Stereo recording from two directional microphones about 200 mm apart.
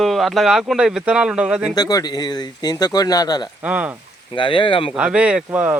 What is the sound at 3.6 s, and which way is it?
Speech, 5° right (ahead or behind).